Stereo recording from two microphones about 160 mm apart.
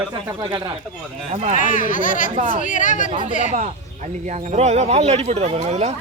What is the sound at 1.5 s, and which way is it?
Speech, 55° left (ahead or behind).